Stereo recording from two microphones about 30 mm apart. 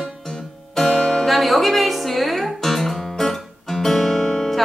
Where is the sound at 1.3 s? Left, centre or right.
Centre.